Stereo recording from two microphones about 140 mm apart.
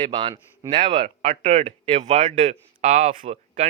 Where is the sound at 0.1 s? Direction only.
35° right (ahead or behind).